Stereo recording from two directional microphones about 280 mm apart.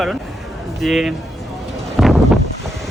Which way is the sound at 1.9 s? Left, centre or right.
Centre.